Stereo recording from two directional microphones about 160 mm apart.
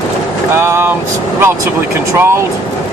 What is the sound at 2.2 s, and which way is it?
Speech, 15° right (ahead or behind).